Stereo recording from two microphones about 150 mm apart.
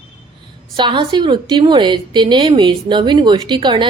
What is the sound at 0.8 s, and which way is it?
A woman's voice, 30° right (ahead or behind).